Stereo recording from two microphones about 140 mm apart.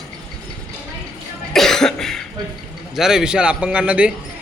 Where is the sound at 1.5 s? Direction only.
5° left (ahead or behind).